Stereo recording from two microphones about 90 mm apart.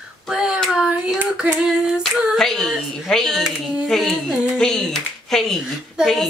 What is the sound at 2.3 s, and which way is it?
Speech, 5° left (ahead or behind).